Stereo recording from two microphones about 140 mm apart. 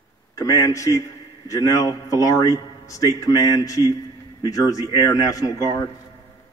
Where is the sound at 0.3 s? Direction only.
25° left (ahead or behind).